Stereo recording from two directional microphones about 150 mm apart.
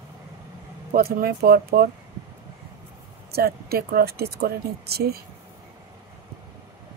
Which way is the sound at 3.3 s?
90° right.